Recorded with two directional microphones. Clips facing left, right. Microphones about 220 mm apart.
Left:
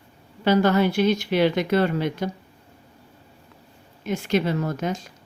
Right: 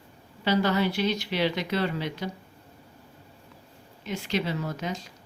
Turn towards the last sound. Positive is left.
turn(degrees=50)  # may be behind; listen again after turning